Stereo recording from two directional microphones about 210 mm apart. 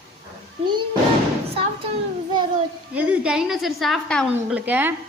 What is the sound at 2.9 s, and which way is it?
A woman's voice, 5° right (ahead or behind).